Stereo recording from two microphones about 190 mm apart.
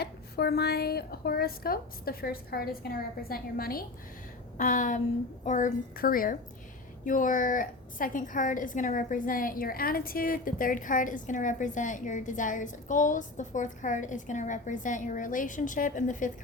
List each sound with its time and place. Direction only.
0.0 s a woman's voice: 60° left (ahead or behind); by 16.3 s 45° left (ahead or behind)